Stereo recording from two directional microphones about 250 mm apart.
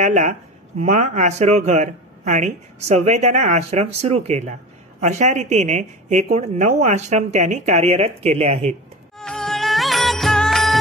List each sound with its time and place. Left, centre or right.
0.0 s speech: right
9.2 s music: centre